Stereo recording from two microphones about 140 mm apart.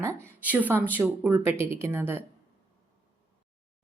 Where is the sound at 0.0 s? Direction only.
15° right (ahead or behind).